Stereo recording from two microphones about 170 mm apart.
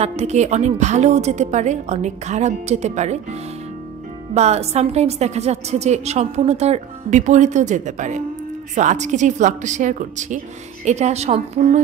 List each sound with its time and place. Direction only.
0.0 s a woman's voice: 40° right (ahead or behind)
4.3 s a woman's voice: 40° right (ahead or behind)